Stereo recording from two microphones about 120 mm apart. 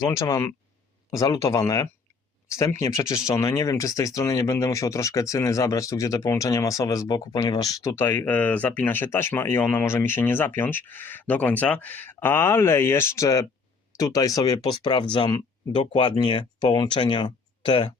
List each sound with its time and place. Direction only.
0.0 s speech: 30° left (ahead or behind); by 17.9 s 45° left (ahead or behind)